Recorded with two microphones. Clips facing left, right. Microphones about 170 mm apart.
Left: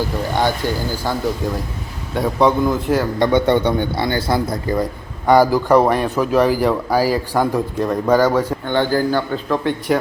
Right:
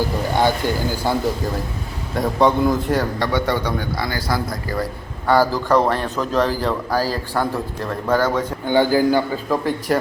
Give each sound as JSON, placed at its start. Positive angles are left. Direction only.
{"t": 0.3, "sound": "speech", "side_deg": -15}
{"t": 2.1, "sound": "a man's voice", "side_deg": 0}
{"t": 3.2, "sound": "a man's voice", "side_deg": 20}
{"t": 8.6, "sound": "speech", "side_deg": -10}